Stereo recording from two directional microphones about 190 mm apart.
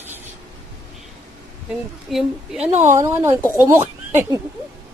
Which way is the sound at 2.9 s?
15° right (ahead or behind).